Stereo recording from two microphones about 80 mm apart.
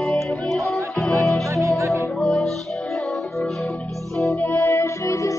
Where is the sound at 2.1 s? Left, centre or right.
Centre.